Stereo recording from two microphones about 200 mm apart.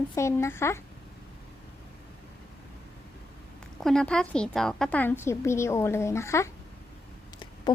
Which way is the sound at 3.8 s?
5° left (ahead or behind).